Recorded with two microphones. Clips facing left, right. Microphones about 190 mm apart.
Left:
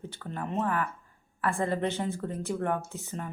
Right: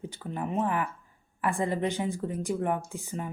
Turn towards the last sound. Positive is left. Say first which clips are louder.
# right 2 dB
turn(degrees=-10)  # may be behind; listen again after turning